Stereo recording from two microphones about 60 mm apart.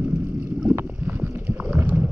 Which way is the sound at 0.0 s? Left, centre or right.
Right.